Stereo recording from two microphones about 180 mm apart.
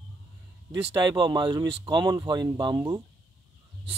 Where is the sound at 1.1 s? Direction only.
25° right (ahead or behind).